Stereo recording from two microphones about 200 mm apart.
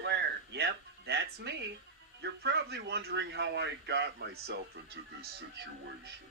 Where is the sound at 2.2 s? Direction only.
55° right (ahead or behind).